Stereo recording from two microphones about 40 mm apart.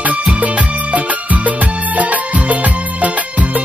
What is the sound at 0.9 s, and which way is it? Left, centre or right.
Music, right.